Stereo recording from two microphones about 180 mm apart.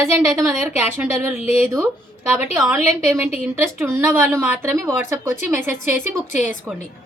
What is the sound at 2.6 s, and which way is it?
A woman's voice, 10° right (ahead or behind).